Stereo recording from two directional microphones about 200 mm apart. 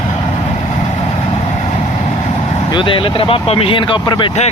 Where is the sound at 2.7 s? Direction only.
25° left (ahead or behind).